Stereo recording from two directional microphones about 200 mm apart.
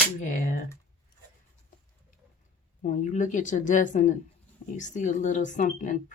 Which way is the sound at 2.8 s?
40° left (ahead or behind).